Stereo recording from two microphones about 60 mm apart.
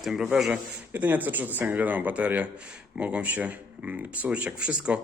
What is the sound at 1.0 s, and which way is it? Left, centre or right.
Speech, right.